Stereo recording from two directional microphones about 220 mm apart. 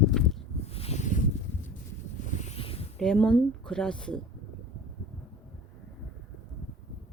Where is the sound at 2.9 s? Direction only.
5° left (ahead or behind).